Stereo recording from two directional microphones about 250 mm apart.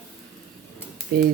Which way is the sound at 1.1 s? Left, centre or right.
Right.